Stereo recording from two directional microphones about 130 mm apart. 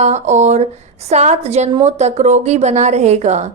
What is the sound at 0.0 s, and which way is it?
A woman's voice, 60° right (ahead or behind).